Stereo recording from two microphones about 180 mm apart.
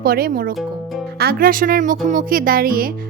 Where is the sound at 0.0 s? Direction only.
55° right (ahead or behind).